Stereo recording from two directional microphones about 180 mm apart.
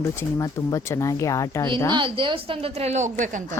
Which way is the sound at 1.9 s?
30° right (ahead or behind).